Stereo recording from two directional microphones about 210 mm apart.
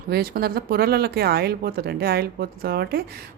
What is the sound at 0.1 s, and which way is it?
Speech, 45° right (ahead or behind).